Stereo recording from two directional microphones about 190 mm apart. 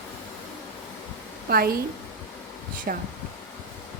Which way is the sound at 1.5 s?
55° right (ahead or behind).